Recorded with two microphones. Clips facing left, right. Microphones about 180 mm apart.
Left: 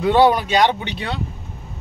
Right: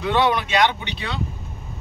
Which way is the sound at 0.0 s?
35° left (ahead or behind).